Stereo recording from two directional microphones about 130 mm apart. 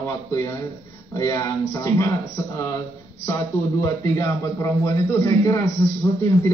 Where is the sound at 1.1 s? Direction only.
25° left (ahead or behind).